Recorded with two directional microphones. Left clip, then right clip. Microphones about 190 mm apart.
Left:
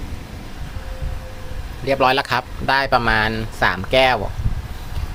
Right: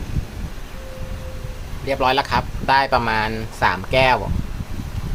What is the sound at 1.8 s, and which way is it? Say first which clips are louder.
Speech: left 2 dB; 20° left (ahead or behind).